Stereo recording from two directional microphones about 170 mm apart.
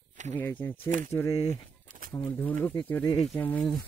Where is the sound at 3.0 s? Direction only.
30° left (ahead or behind).